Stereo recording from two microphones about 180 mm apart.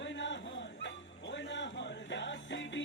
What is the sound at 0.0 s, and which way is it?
Music, 90° left.